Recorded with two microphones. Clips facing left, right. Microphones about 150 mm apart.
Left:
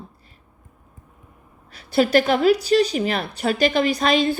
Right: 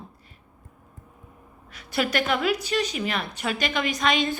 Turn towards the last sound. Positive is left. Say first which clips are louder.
# left 5 dB
turn(degrees=35)  # may be behind; listen again after turning